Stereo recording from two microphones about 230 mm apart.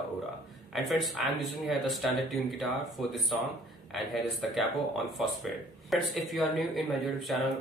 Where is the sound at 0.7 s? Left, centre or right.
Centre.